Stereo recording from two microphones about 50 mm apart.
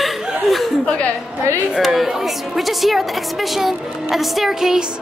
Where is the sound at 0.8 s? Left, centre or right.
Left.